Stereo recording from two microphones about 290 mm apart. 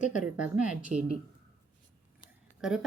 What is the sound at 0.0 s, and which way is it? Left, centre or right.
Speech, left.